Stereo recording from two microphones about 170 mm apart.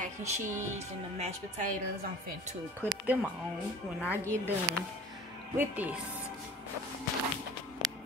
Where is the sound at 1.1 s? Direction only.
40° right (ahead or behind).